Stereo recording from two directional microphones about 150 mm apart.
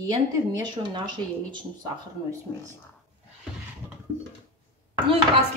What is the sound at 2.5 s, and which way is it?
Speech, 10° left (ahead or behind).